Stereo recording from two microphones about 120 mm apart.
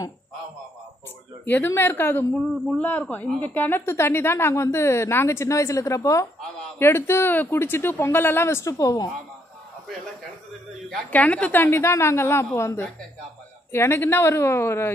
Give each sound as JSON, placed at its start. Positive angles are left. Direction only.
{"t": 1.4, "sound": "a woman's voice", "side_deg": 15}
{"t": 11.1, "sound": "a woman's voice", "side_deg": 10}